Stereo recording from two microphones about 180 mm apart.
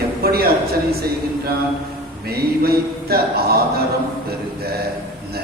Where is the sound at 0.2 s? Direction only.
60° right (ahead or behind).